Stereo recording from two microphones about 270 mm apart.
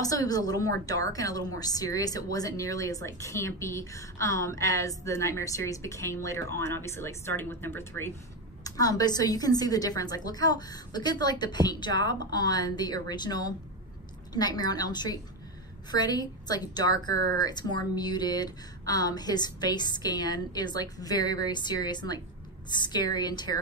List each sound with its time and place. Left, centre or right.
0.3 s speech: centre
17.1 s speech: right
17.5 s speech: centre